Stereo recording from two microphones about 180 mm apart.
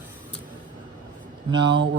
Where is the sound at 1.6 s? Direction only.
80° right.